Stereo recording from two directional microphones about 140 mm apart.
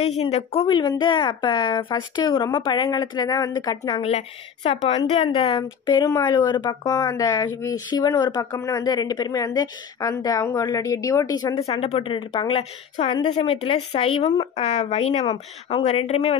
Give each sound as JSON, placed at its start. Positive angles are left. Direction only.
{"t": 0.0, "sound": "speech", "side_deg": 50}
{"t": 0.7, "sound": "speech", "side_deg": 30}
{"t": 4.6, "sound": "speech", "side_deg": 45}
{"t": 5.6, "sound": "speech", "side_deg": 30}
{"t": 11.6, "sound": "speech", "side_deg": 45}